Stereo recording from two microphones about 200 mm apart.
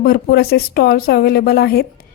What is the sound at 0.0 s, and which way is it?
A woman's voice, 50° left (ahead or behind).